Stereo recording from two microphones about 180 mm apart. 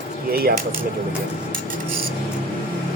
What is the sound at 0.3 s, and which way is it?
Speech, 60° right (ahead or behind).